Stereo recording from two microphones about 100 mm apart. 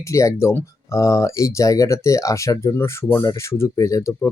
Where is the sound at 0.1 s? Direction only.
30° left (ahead or behind).